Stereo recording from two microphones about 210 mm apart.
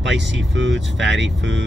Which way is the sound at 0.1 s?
60° right (ahead or behind).